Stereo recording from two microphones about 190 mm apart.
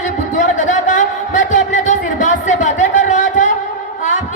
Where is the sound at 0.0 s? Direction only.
40° left (ahead or behind).